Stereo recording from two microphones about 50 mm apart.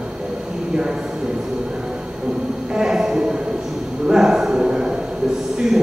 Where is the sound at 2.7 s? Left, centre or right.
Centre.